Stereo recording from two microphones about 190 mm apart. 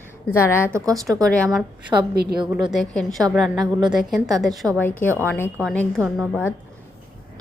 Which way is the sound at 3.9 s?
Centre (ahead or behind).